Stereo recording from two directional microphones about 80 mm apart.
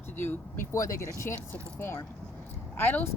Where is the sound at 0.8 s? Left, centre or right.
Left.